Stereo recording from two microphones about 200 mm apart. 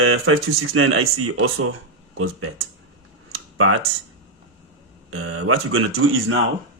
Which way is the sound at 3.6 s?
90° right.